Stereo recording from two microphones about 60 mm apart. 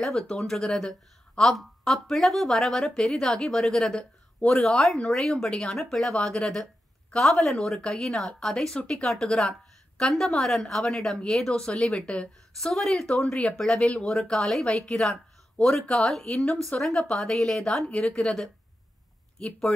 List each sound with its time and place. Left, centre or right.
0.0 s a woman's voice: centre
10.9 s a woman's voice: centre
13.1 s speech: centre
14.3 s a woman's voice: centre